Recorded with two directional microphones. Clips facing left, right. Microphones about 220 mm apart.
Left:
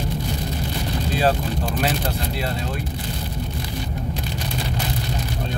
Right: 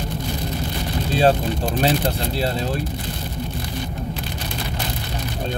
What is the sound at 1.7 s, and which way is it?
Speech, 30° right (ahead or behind).